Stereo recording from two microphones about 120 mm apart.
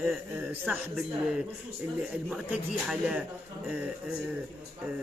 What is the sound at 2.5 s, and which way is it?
Speech, 5° right (ahead or behind).